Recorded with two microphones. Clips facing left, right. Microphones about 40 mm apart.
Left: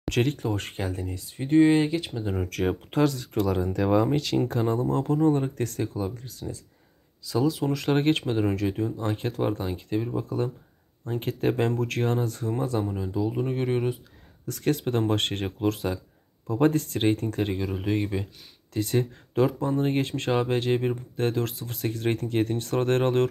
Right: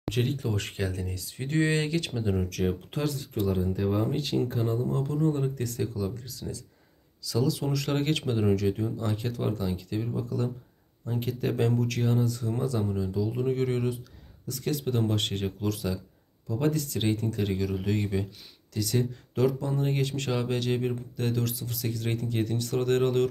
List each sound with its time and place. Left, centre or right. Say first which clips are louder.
0.1 s speech: left 4 dB; left
0.5 s speech: left 2 dB; left
1.5 s speech: left 7 dB; left
2.4 s speech: left 2 dB; left
7.2 s speech: left 3 dB; left
8.9 s speech: left 3 dB; left
11.1 s speech: left 3 dB; left
12.8 s speech: left 1 dB; left
14.4 s speech: left 4 dB; left
17.6 s speech: left 2 dB; left
18.7 s speech: left 3 dB; left